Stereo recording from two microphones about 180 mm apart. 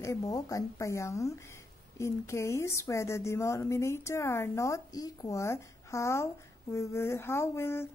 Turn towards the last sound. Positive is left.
turn(degrees=15)  # may be behind; listen again after turning